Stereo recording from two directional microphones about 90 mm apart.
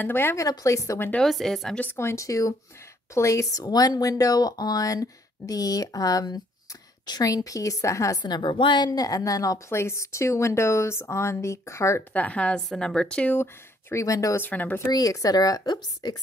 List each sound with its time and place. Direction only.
0.0 s speech: 25° left (ahead or behind)
0.4 s a woman's voice: 40° left (ahead or behind)
1.2 s speech: 5° left (ahead or behind)
1.8 s a woman's voice: 25° left (ahead or behind)
3.6 s a woman's voice: 45° left (ahead or behind)
8.2 s a woman's voice: 60° left (ahead or behind); by 12.0 s 35° left (ahead or behind)
12.1 s a woman's voice: 15° left (ahead or behind)
13.4 s speech: 25° left (ahead or behind)
14.0 s a woman's voice: 40° left (ahead or behind)
14.4 s speech: 20° left (ahead or behind)
14.9 s speech: 45° left (ahead or behind)